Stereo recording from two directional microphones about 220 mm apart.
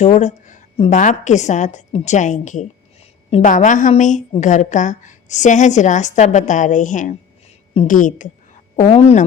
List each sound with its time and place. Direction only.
0.0 s a woman's voice: 30° left (ahead or behind)